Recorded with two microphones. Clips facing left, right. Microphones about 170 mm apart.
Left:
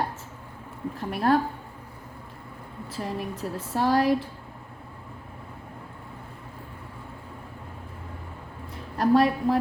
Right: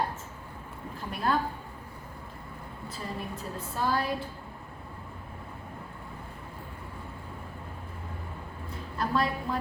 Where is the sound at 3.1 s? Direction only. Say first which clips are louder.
Left 5 dB; 80° left.